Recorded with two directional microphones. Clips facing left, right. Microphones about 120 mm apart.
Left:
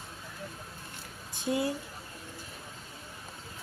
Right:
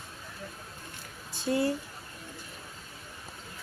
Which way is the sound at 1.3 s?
15° left (ahead or behind).